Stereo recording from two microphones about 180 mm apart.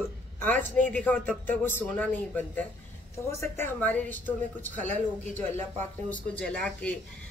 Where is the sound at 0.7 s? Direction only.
10° left (ahead or behind).